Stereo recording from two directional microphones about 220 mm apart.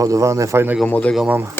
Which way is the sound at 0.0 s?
15° right (ahead or behind).